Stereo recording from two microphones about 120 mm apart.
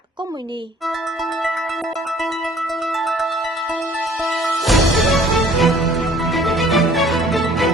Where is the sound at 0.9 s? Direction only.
Centre (ahead or behind).